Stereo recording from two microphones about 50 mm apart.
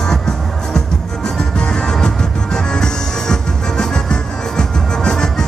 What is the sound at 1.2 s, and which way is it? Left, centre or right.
Music, centre.